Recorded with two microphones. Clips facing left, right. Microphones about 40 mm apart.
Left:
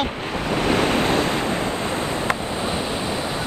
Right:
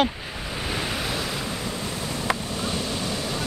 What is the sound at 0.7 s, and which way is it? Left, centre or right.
Waves, left.